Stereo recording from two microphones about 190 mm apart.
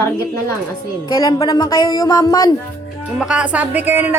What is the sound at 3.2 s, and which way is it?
Speech, 5° right (ahead or behind).